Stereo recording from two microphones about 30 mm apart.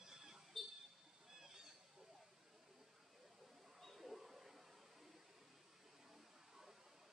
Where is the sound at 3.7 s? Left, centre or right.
Centre.